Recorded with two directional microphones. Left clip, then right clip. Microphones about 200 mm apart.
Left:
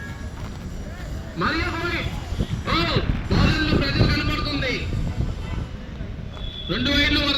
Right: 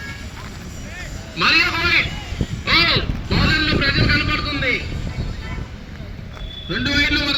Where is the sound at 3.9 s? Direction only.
80° left.